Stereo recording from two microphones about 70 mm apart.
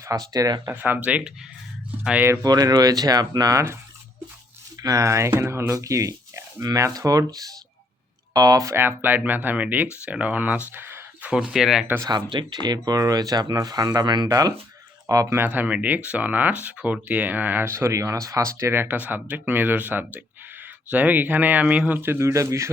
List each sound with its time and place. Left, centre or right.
0.0 s speech: right
0.7 s speech: right
2.4 s speech: right
4.8 s speech: right
5.7 s speech: right
8.6 s speech: right
11.2 s speech: centre
12.0 s speech: right
14.3 s speech: right
15.4 s speech: right
17.7 s speech: right
18.7 s speech: right